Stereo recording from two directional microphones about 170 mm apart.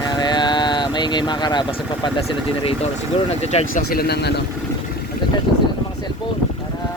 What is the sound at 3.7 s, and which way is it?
Speech, 60° left (ahead or behind).